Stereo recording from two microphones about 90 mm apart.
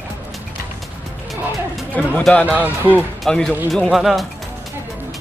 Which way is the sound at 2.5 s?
20° right (ahead or behind).